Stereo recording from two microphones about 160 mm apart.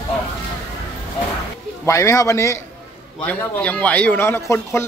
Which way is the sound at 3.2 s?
10° left (ahead or behind).